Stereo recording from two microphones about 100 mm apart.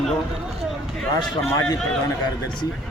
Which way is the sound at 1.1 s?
40° left (ahead or behind).